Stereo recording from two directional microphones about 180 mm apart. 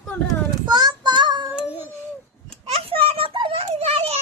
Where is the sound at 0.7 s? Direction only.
25° right (ahead or behind).